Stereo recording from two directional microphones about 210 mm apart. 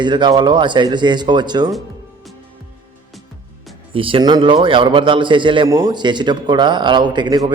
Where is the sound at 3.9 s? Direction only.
25° right (ahead or behind).